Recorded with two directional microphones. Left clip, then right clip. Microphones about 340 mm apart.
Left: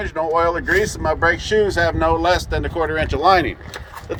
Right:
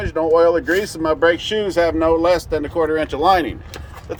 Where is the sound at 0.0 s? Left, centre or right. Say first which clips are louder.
Right 4 dB; right.